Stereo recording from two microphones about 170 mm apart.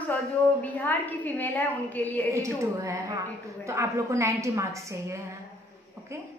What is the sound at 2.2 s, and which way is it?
A woman's voice, 20° right (ahead or behind).